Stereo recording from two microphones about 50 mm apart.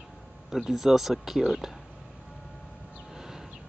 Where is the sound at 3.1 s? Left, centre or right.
Centre.